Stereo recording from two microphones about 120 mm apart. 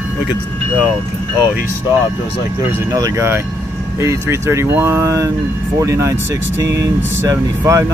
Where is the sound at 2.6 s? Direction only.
20° right (ahead or behind).